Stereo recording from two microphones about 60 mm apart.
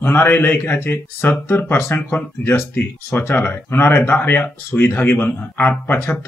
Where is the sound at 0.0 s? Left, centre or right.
Left.